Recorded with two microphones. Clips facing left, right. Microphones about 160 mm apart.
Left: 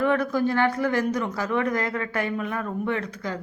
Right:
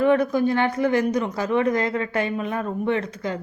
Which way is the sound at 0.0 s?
20° right (ahead or behind).